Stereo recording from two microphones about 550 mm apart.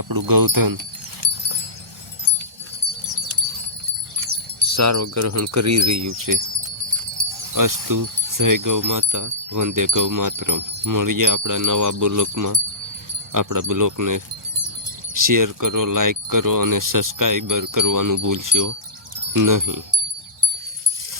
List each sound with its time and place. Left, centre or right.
0.0 s speech: right
4.8 s wind chime: right
7.2 s speech: right